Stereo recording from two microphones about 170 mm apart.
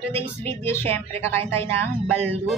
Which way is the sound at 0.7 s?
15° left (ahead or behind).